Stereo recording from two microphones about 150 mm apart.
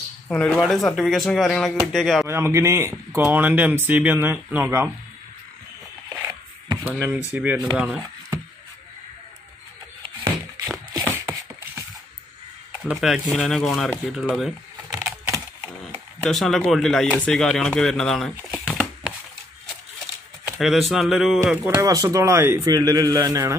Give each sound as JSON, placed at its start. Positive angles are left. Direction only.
{"t": 0.3, "sound": "speech", "side_deg": 0}
{"t": 2.2, "sound": "speech", "side_deg": -15}
{"t": 6.0, "sound": "a sound", "side_deg": -10}
{"t": 6.9, "sound": "speech", "side_deg": -15}
{"t": 10.9, "sound": "a sound", "side_deg": -20}
{"t": 12.8, "sound": "speech", "side_deg": 0}
{"t": 14.9, "sound": "computer keyboard", "side_deg": -20}
{"t": 15.8, "sound": "speech", "side_deg": 0}
{"t": 20.5, "sound": "speech", "side_deg": 0}
{"t": 21.6, "sound": "a man's voice", "side_deg": -25}